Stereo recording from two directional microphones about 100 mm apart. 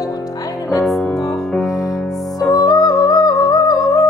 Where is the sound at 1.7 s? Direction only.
35° left (ahead or behind).